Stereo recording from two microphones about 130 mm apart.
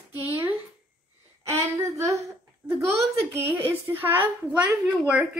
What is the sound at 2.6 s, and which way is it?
A child's voice, 10° right (ahead or behind).